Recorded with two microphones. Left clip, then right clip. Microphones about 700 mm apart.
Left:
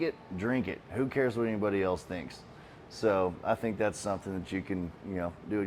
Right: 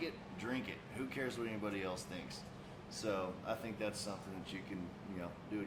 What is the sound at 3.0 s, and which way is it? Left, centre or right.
Speech, left.